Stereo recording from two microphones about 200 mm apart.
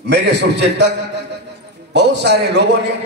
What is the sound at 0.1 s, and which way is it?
Speech, 60° right (ahead or behind).